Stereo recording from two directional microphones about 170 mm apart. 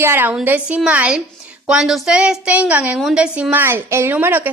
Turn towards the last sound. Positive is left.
turn(degrees=-10)  # may be behind; listen again after turning